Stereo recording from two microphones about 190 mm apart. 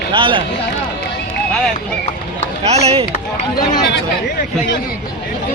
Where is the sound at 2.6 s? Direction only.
35° right (ahead or behind).